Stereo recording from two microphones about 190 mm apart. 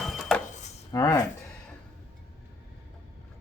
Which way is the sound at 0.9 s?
20° left (ahead or behind).